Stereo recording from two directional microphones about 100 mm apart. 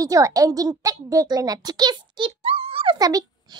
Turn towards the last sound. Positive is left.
turn(degrees=-40)  # may be behind; listen again after turning